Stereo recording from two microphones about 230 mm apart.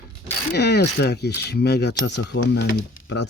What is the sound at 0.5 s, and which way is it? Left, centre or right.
Speech, left.